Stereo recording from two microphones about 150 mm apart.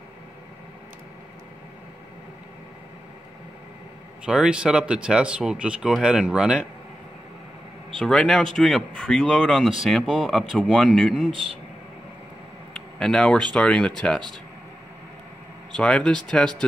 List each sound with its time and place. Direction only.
4.3 s speech: 5° right (ahead or behind)
8.0 s speech: 5° left (ahead or behind)
12.7 s speech: 5° left (ahead or behind)
15.7 s speech: 5° left (ahead or behind)